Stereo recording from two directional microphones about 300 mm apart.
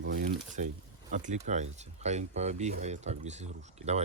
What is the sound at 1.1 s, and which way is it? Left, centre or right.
Speech, right.